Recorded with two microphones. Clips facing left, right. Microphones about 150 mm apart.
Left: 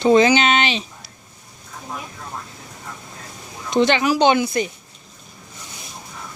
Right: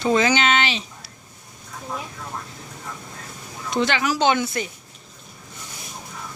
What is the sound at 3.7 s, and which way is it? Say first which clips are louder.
Speech: left 5 dB; 20° left (ahead or behind).